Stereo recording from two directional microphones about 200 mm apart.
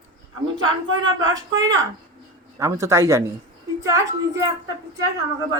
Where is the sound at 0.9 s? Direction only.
75° right (ahead or behind).